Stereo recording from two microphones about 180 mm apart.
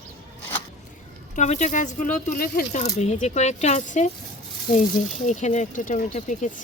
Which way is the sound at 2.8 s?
40° left (ahead or behind).